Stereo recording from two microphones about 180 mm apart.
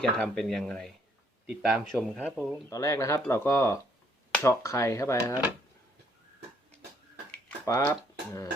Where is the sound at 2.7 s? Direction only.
20° left (ahead or behind).